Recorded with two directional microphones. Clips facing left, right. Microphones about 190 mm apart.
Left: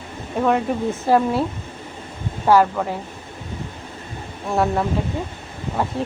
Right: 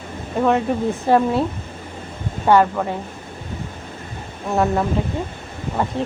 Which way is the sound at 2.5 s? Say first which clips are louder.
Right 1 dB; centre (ahead or behind).